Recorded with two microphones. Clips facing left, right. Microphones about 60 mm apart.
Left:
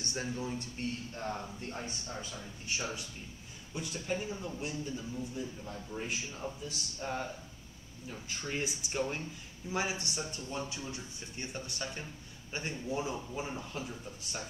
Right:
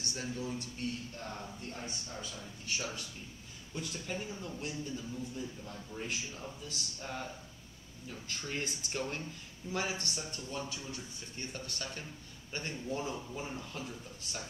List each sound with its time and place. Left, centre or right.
0.0 s a man's voice: left
3.7 s speech: centre